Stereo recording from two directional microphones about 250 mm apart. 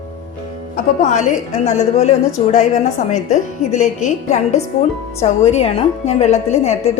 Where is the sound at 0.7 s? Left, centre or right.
Left.